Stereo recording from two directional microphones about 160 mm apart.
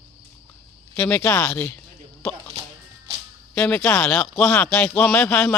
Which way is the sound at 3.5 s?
5° left (ahead or behind).